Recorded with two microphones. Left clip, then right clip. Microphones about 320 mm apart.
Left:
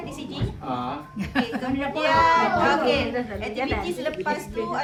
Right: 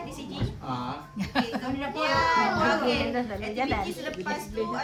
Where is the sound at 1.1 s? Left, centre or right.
Right.